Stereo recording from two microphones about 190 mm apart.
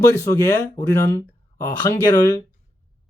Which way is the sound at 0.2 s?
15° left (ahead or behind).